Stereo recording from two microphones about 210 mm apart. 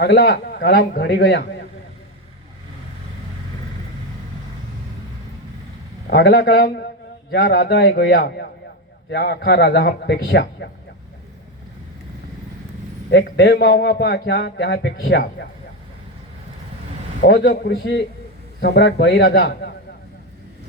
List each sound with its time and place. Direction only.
0.0 s a man's voice: 50° left (ahead or behind)
6.1 s a man's voice: 50° left (ahead or behind)
13.1 s a man's voice: 55° left (ahead or behind)
17.2 s a man's voice: 50° left (ahead or behind)